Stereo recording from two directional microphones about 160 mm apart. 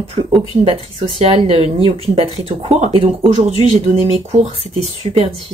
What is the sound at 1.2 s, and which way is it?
Speech, 40° right (ahead or behind).